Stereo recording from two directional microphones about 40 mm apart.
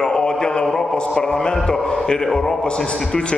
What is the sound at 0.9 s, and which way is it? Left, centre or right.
Speech, centre.